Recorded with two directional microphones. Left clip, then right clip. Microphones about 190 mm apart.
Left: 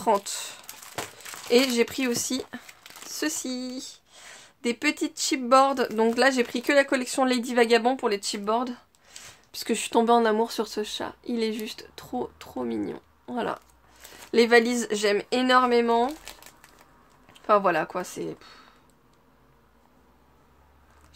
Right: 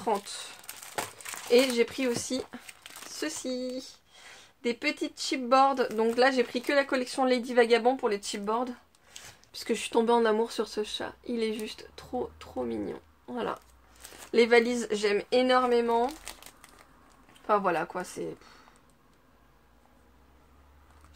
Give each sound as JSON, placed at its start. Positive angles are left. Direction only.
{"t": 0.0, "sound": "speech", "side_deg": 40}
{"t": 1.5, "sound": "speech", "side_deg": 35}
{"t": 2.8, "sound": "a sound", "side_deg": 10}
{"t": 3.2, "sound": "speech", "side_deg": 30}
{"t": 17.3, "sound": "speech", "side_deg": 30}